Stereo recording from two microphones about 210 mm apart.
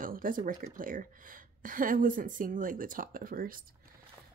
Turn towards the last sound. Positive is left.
turn(degrees=-45)  # may be behind; listen again after turning